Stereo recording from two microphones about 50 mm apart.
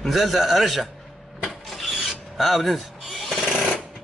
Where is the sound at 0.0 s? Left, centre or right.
Centre.